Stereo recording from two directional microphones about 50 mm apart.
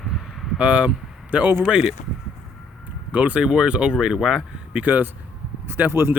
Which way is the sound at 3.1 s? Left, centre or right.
Right.